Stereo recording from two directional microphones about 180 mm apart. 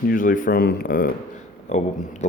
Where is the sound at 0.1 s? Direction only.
50° left (ahead or behind).